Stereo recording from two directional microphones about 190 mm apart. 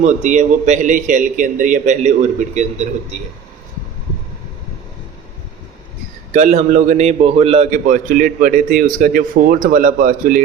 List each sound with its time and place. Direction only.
0.0 s a man's voice: 40° right (ahead or behind)
6.3 s a man's voice: 40° right (ahead or behind)